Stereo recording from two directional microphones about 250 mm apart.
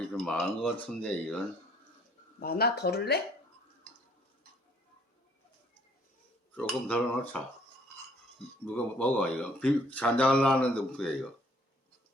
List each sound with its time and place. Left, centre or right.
0.3 s speech: centre
2.4 s speech: left
6.6 s speech: centre
8.6 s speech: centre